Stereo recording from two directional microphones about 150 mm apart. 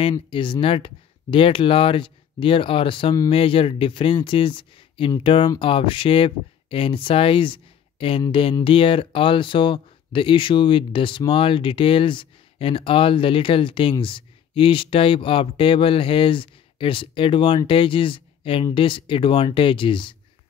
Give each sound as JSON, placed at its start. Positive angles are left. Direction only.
{"t": 0.3, "sound": "speech", "side_deg": 35}